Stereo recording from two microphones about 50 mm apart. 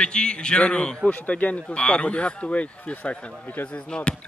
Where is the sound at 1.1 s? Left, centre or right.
Left.